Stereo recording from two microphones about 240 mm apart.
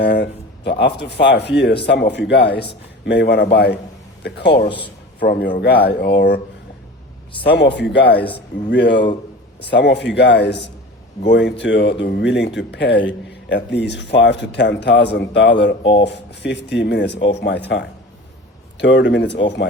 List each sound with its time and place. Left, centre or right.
0.0 s speech: left
7.5 s speech: left
8.0 s speech: centre
8.7 s speech: left
15.8 s speech: left
16.0 s speech: left